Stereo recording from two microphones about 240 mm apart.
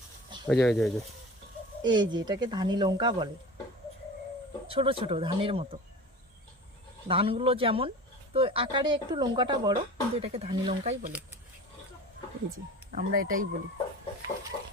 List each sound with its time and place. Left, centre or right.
0.4 s speech: centre
1.8 s speech: centre
4.7 s speech: right
7.1 s speech: right
12.9 s speech: right